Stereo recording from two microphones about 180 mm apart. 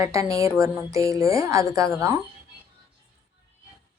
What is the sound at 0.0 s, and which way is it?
A woman's voice, 15° right (ahead or behind).